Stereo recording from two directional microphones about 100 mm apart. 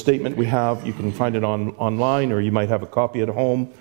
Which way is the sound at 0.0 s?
15° right (ahead or behind).